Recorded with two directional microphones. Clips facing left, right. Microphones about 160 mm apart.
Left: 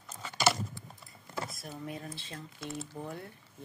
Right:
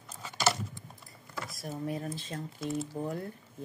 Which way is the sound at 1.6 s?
40° right (ahead or behind).